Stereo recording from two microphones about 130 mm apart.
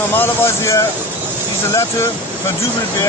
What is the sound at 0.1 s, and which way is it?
Speech, 15° left (ahead or behind).